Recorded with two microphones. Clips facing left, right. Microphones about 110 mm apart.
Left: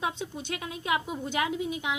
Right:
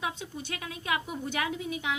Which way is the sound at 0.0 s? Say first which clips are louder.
Left 3 dB; 25° left (ahead or behind).